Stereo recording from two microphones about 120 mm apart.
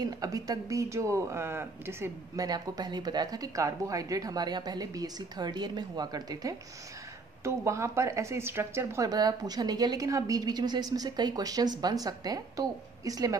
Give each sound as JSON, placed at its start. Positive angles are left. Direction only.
{"t": 0.0, "sound": "speech", "side_deg": -30}
{"t": 2.4, "sound": "a woman's voice", "side_deg": -35}